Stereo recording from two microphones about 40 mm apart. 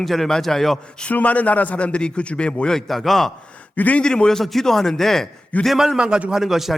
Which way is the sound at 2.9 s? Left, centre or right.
Centre.